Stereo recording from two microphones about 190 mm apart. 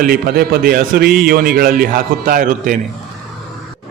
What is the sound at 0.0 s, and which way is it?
A man's voice, 55° right (ahead or behind).